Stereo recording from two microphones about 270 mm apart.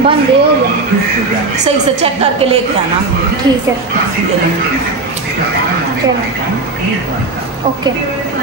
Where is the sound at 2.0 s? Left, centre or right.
Right.